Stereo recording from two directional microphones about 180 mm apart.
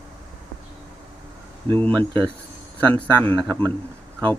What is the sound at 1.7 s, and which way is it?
Speech, 10° left (ahead or behind).